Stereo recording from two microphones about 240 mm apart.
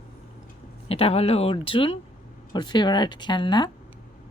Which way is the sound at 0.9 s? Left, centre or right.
Left.